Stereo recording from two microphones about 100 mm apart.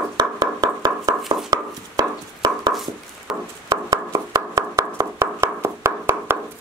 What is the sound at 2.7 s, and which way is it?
Chopping, centre (ahead or behind).